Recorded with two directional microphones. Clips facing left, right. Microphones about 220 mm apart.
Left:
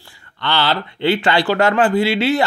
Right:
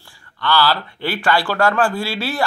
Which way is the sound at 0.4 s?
25° left (ahead or behind).